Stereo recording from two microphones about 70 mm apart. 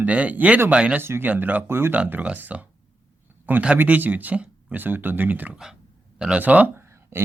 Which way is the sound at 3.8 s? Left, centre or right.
Right.